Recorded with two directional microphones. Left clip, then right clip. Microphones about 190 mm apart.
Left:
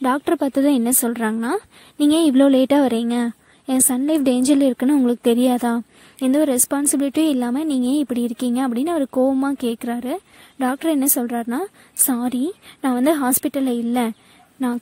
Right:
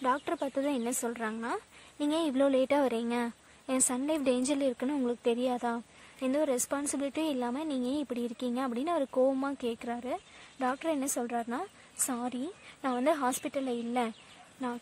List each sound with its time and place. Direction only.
0.0 s a woman's voice: 40° left (ahead or behind)